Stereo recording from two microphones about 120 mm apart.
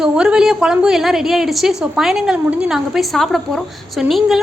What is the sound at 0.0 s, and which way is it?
A woman's voice, 5° right (ahead or behind).